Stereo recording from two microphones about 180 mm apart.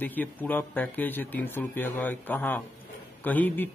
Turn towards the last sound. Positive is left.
turn(degrees=10)  # may be behind; listen again after turning